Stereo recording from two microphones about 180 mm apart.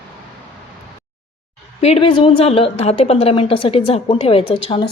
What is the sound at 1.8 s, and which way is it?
A woman's voice, 30° left (ahead or behind).